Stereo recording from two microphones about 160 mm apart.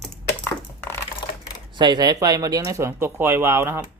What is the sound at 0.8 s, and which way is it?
Typing, 15° left (ahead or behind).